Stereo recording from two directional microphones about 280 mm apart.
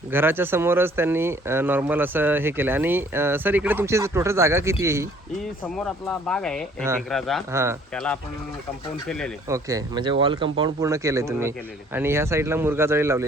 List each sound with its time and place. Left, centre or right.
0.1 s speech: centre
5.6 s speech: centre
7.5 s speech: centre
7.9 s speech: centre
9.5 s speech: centre